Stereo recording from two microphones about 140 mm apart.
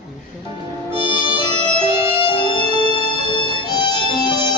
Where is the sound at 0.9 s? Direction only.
35° left (ahead or behind).